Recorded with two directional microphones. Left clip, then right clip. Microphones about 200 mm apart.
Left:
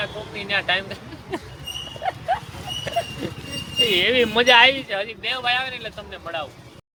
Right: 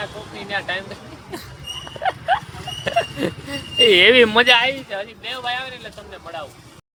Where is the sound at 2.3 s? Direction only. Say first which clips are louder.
Right 4 dB; 25° right (ahead or behind).